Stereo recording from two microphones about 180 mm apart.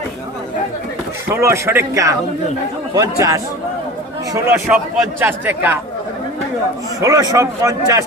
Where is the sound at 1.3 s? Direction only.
15° right (ahead or behind).